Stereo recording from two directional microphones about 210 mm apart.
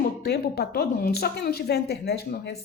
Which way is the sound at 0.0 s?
50° left (ahead or behind).